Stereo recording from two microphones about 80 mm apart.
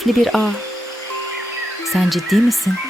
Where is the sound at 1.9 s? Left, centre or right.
Centre.